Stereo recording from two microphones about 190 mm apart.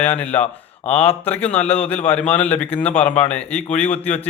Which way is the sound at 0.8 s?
30° left (ahead or behind).